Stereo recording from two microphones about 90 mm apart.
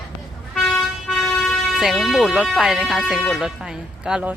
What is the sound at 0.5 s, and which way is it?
Vehicle, centre (ahead or behind).